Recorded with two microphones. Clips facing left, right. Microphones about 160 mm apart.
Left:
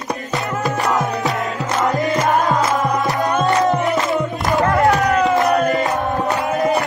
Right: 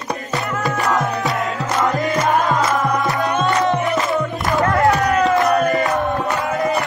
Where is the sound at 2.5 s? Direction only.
20° left (ahead or behind).